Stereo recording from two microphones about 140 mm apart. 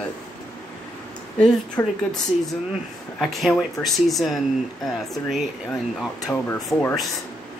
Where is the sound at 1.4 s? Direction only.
5° left (ahead or behind).